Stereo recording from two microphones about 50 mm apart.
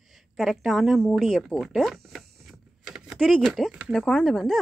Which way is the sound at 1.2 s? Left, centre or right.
Centre.